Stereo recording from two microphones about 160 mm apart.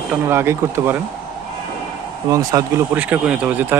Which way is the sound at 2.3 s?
20° right (ahead or behind).